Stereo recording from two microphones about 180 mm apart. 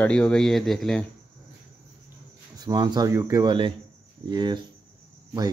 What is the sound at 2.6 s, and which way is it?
Speech, 25° right (ahead or behind).